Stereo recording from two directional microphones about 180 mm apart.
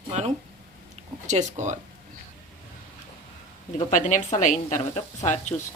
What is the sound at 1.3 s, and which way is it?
Speech, 40° right (ahead or behind).